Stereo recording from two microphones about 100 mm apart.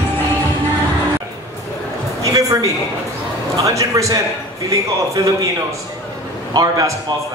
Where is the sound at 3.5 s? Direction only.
35° right (ahead or behind).